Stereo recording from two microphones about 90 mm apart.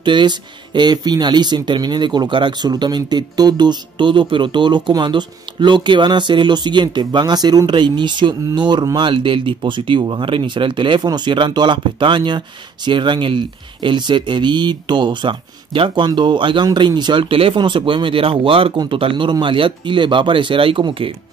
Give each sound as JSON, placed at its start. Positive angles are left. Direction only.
{"t": 0.0, "sound": "speech", "side_deg": -60}
{"t": 9.0, "sound": "speech", "side_deg": -70}
{"t": 16.1, "sound": "speech", "side_deg": -60}
{"t": 18.9, "sound": "speech", "side_deg": -75}